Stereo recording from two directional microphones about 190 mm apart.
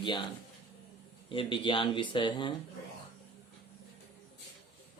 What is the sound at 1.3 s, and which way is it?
Speech, 25° left (ahead or behind).